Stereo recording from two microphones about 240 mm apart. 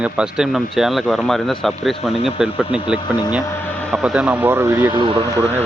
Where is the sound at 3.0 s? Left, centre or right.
Centre.